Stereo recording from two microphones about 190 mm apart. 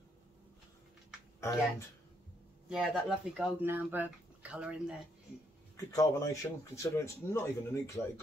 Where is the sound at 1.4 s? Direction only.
15° left (ahead or behind).